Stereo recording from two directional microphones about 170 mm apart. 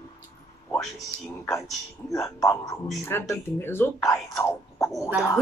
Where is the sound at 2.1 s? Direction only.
20° left (ahead or behind).